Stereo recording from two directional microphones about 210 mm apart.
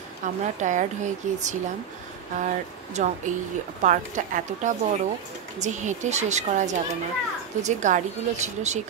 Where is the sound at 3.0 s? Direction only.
35° right (ahead or behind).